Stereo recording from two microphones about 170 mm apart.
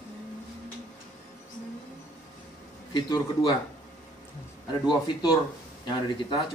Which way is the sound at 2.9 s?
25° left (ahead or behind).